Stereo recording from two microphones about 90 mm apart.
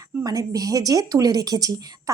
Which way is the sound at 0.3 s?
40° right (ahead or behind).